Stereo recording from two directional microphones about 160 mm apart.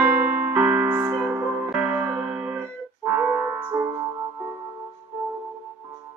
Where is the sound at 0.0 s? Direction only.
10° right (ahead or behind).